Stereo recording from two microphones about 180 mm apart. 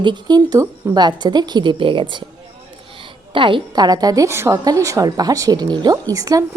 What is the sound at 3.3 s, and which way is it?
A woman's voice, 30° right (ahead or behind).